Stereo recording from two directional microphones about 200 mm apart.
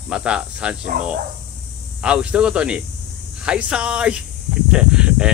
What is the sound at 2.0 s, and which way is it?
Speech, 5° right (ahead or behind).